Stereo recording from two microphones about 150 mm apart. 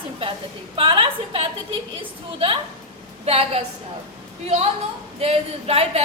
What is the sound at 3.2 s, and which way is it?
Speech, 40° right (ahead or behind).